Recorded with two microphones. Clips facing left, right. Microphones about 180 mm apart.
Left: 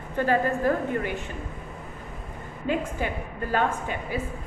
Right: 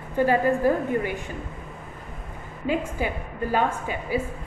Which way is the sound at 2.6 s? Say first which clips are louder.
Right 2 dB; 10° right (ahead or behind).